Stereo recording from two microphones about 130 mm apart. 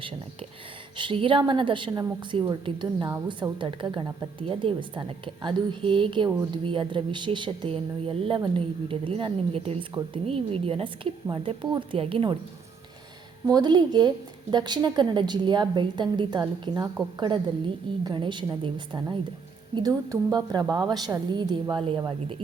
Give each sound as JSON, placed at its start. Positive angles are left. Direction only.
{"t": 0.9, "sound": "a woman's voice", "side_deg": -40}
{"t": 13.5, "sound": "a woman's voice", "side_deg": -30}